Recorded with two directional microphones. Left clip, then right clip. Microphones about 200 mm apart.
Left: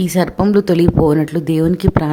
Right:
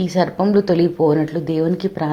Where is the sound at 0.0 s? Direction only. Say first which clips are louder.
Left 1 dB; 40° left (ahead or behind).